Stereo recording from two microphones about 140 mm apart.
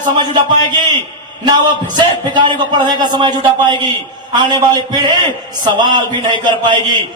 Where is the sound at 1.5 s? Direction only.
30° right (ahead or behind).